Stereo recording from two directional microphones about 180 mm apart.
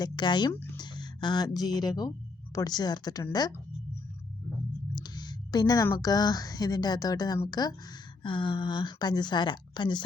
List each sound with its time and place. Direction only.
0.0 s a woman's voice: 25° left (ahead or behind)
4.9 s a woman's voice: 25° left (ahead or behind)